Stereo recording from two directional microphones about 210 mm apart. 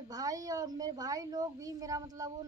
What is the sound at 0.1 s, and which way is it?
A woman's voice, 15° right (ahead or behind).